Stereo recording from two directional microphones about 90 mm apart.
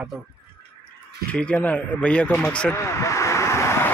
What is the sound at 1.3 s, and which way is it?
A man's voice, 15° left (ahead or behind).